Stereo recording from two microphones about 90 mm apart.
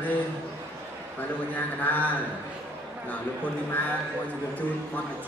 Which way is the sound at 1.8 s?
20° left (ahead or behind).